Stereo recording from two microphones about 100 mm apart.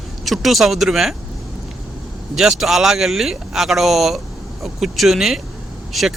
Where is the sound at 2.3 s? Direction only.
5° right (ahead or behind).